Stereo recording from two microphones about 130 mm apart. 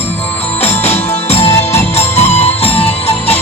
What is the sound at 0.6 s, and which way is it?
Music, 55° left (ahead or behind).